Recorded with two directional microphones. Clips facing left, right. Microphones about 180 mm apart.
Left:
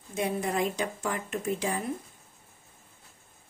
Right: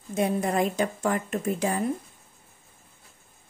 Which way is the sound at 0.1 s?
50° right (ahead or behind).